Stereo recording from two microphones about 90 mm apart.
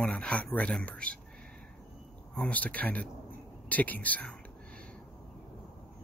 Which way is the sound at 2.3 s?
15° left (ahead or behind).